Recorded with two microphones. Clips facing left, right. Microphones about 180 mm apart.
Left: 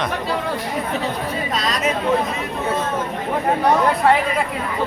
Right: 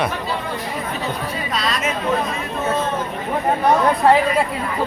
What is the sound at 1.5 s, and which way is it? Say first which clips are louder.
Speech: even; 40° left (ahead or behind).